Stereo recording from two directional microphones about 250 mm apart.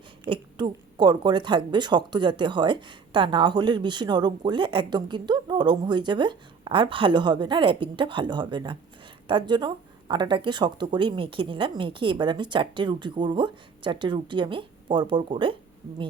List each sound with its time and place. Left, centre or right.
0.3 s speech: centre